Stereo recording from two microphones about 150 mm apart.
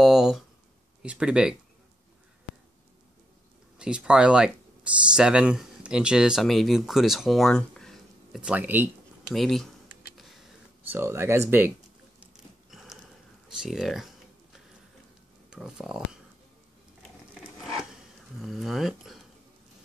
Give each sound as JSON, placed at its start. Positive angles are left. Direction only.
{"t": 0.0, "sound": "speech", "side_deg": 0}
{"t": 3.7, "sound": "speech", "side_deg": -5}
{"t": 8.4, "sound": "speech", "side_deg": -10}
{"t": 9.3, "sound": "speech", "side_deg": 0}
{"t": 10.9, "sound": "speech", "side_deg": -15}
{"t": 12.7, "sound": "a sound", "side_deg": 0}
{"t": 13.6, "sound": "speech", "side_deg": 0}
{"t": 15.5, "sound": "speech", "side_deg": -5}
{"t": 18.4, "sound": "speech", "side_deg": 0}